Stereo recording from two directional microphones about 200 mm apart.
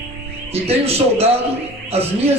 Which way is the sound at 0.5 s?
30° right (ahead or behind).